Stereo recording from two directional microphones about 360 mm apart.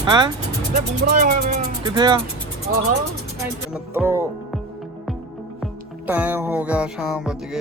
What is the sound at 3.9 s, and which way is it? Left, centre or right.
Music, centre.